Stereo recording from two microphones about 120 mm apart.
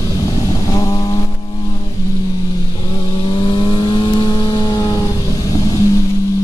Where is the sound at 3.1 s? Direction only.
40° left (ahead or behind).